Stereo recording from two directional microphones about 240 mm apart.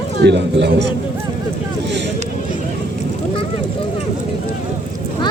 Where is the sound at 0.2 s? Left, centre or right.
Right.